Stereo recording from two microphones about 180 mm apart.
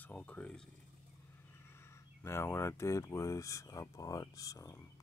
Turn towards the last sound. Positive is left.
turn(degrees=15)  # may be behind; listen again after turning